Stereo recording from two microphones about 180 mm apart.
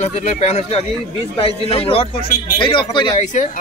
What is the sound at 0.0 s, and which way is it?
A man's voice, 35° left (ahead or behind).